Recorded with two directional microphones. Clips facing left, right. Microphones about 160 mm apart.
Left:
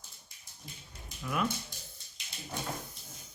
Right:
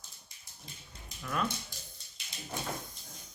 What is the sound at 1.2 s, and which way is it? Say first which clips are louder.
Speech: left 1 dB; 5° left (ahead or behind).